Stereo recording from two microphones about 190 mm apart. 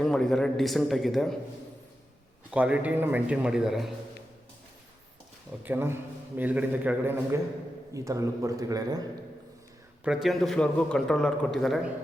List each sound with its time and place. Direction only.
0.0 s a man's voice: 5° left (ahead or behind)
2.5 s a man's voice: 5° right (ahead or behind)
5.6 s a man's voice: 10° right (ahead or behind)
10.0 s a man's voice: 5° right (ahead or behind)